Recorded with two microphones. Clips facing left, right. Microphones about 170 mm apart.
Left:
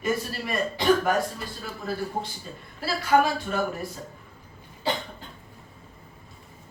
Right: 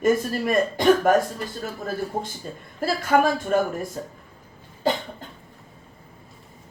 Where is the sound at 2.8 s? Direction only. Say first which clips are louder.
Right 2 dB; 50° right (ahead or behind).